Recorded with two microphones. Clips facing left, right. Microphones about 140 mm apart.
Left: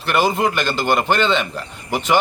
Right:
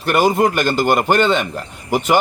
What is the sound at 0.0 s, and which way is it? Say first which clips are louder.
A man's voice: right 3 dB; 45° right (ahead or behind).